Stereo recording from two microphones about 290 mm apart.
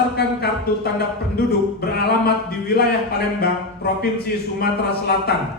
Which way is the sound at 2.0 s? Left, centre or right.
Left.